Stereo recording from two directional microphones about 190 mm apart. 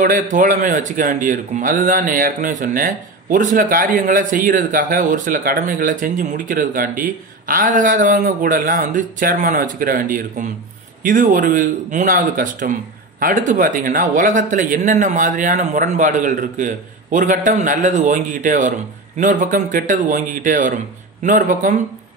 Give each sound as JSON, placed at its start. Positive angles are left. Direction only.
{"t": 0.0, "sound": "speech", "side_deg": -45}